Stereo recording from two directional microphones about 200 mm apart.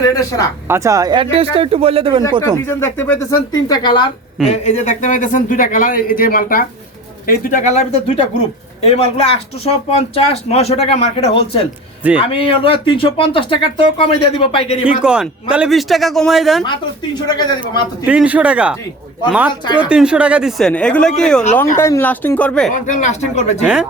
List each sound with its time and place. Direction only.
0.1 s speech: 15° left (ahead or behind)
0.7 s speech: 15° right (ahead or behind)
2.4 s speech: 10° left (ahead or behind)
4.4 s speech: 35° left (ahead or behind)
14.8 s speech: 5° right (ahead or behind)
17.2 s speech: 20° left (ahead or behind)
18.0 s speech: 5° right (ahead or behind)
19.6 s speech: 25° left (ahead or behind)
19.9 s speech: 5° right (ahead or behind)
22.7 s speech: 40° left (ahead or behind)